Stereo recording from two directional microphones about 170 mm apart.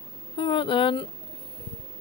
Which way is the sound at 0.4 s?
30° left (ahead or behind).